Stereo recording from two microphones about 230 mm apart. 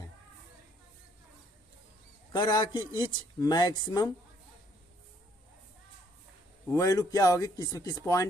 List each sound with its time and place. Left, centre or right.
2.3 s a man's voice: centre
6.7 s speech: centre